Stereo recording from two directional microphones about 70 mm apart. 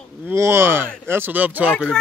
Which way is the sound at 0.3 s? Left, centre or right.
Right.